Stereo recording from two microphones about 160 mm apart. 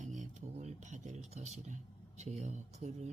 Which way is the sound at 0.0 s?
50° right (ahead or behind).